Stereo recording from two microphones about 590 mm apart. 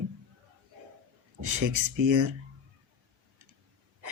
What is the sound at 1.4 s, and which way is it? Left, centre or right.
Speech, right.